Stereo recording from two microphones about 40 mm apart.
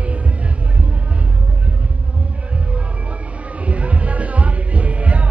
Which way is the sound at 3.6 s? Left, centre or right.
Right.